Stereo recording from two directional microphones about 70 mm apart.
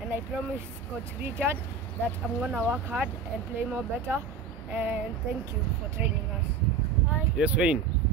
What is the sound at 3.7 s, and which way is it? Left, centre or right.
Speech, right.